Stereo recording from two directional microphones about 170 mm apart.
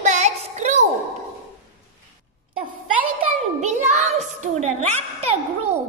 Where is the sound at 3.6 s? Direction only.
45° right (ahead or behind).